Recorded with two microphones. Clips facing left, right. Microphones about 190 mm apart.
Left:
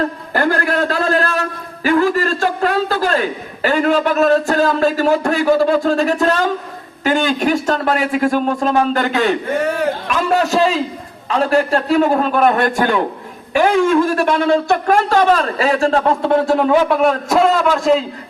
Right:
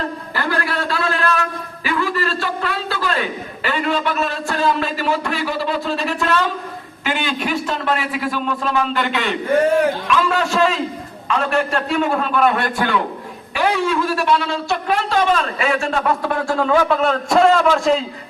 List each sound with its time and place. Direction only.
0.3 s a sound: 45° left (ahead or behind)
7.0 s a man's voice: 45° left (ahead or behind); by 17.2 s 15° left (ahead or behind)
17.2 s a man's voice: 5° left (ahead or behind)